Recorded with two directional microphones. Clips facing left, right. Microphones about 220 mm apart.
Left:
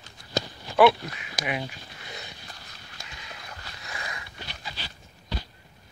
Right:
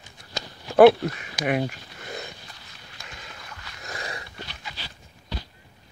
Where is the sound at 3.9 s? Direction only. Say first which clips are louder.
Right 4 dB; 35° right (ahead or behind).